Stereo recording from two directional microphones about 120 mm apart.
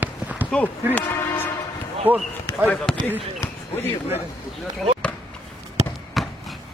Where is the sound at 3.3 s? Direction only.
20° left (ahead or behind).